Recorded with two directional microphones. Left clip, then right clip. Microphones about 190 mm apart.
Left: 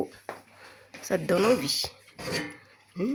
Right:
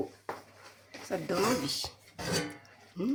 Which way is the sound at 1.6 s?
35° left (ahead or behind).